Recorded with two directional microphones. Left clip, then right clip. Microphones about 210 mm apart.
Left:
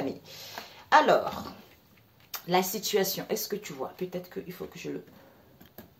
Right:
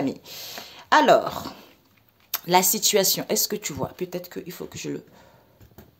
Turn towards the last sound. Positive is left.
turn(degrees=-50)  # may be behind; listen again after turning